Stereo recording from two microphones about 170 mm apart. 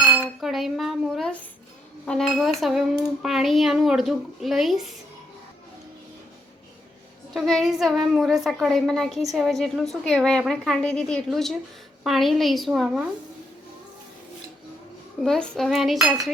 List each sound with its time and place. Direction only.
0.2 s dishes: centre (ahead or behind)
2.0 s a child's voice: centre (ahead or behind)
7.3 s a child's voice: centre (ahead or behind)
15.2 s a child's voice: centre (ahead or behind)